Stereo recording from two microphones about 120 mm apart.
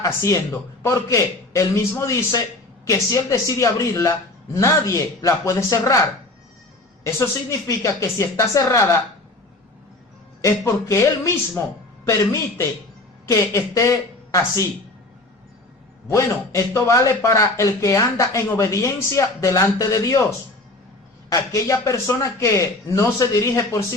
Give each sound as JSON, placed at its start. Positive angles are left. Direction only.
{"t": 0.0, "sound": "a man's voice", "side_deg": 25}
{"t": 10.4, "sound": "a man's voice", "side_deg": 25}
{"t": 16.0, "sound": "a man's voice", "side_deg": 25}
{"t": 21.2, "sound": "a man's voice", "side_deg": 25}